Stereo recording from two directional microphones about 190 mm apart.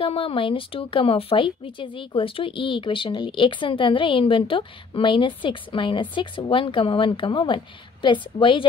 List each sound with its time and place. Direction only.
0.0 s speech: 30° left (ahead or behind)